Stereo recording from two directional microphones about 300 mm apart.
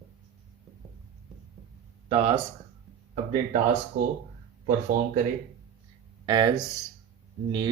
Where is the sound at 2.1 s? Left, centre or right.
Centre.